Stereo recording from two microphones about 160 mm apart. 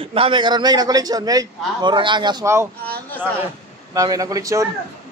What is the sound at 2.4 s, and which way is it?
Speech, 15° right (ahead or behind).